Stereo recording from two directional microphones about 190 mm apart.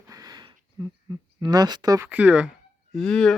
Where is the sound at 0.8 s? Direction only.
20° right (ahead or behind).